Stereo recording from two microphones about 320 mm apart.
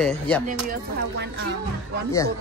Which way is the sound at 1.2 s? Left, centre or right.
Right.